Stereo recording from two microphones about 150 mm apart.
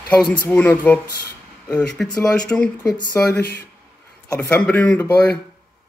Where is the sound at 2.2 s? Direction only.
5° left (ahead or behind).